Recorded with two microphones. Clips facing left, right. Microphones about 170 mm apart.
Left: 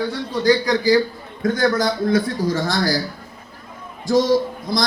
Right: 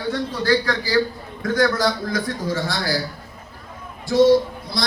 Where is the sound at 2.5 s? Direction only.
40° left (ahead or behind).